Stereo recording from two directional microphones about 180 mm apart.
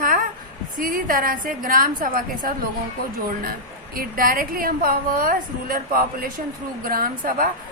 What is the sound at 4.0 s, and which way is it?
A woman's voice, 50° right (ahead or behind).